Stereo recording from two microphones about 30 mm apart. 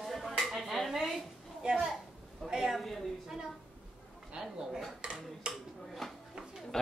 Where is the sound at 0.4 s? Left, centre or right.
Centre.